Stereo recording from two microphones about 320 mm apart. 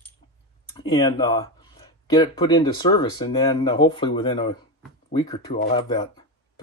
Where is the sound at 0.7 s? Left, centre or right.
Centre.